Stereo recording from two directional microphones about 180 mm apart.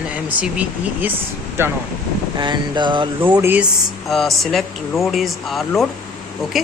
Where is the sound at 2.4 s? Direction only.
25° right (ahead or behind).